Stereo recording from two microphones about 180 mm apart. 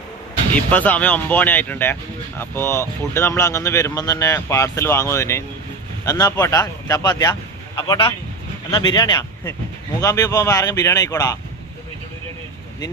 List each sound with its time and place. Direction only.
0.5 s speech: 10° left (ahead or behind)